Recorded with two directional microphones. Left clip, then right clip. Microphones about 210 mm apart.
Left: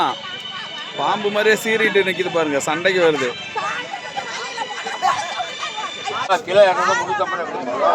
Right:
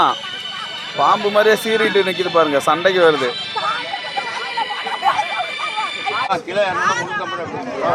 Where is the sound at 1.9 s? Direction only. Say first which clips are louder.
Right 1 dB; 55° right (ahead or behind).